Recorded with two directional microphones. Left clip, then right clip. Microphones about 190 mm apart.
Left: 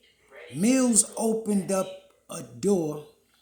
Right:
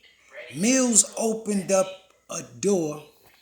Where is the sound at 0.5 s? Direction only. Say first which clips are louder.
Right 2 dB; 20° left (ahead or behind).